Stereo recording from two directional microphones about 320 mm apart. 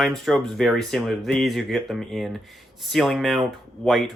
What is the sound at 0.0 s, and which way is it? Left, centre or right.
Speech, centre.